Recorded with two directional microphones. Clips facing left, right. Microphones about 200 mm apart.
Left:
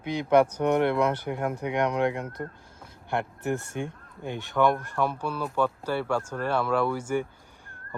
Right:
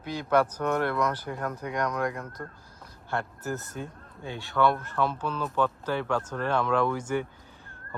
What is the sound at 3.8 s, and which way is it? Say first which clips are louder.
Speech: left 5 dB; 75° left (ahead or behind).